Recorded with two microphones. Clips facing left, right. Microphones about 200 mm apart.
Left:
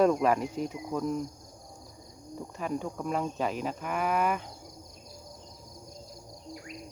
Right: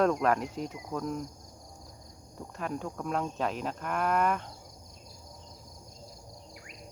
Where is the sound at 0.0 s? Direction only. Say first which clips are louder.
Left 2 dB; 5° left (ahead or behind).